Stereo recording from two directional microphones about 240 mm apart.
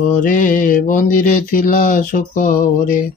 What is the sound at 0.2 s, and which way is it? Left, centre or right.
Speech, left.